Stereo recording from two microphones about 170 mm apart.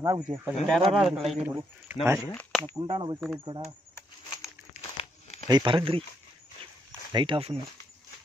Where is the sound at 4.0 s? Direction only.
20° left (ahead or behind).